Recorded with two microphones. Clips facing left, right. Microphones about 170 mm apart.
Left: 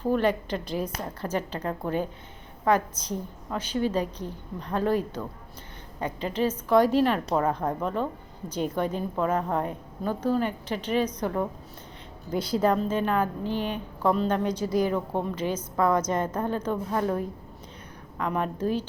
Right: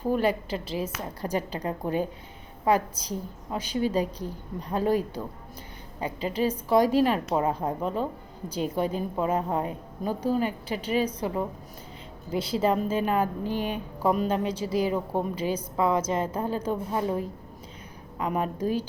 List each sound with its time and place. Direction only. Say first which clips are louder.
0.0 s a woman's voice: left 1 dB; 10° right (ahead or behind)
12.5 s a woman's voice: left 1 dB; 10° right (ahead or behind)
16.0 s a woman's voice: even; 30° right (ahead or behind)
16.2 s a woman's voice: even; 10° right (ahead or behind)
18.2 s a woman's voice: even; 10° right (ahead or behind)